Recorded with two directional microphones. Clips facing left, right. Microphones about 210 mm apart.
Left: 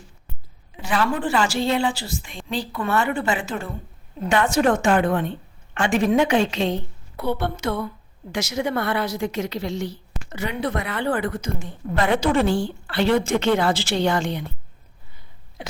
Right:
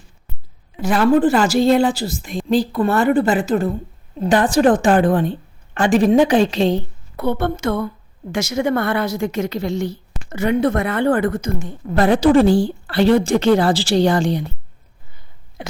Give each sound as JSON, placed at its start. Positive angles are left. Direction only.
{"t": 0.8, "sound": "a woman's voice", "side_deg": -40}
{"t": 7.2, "sound": "a woman's voice", "side_deg": -50}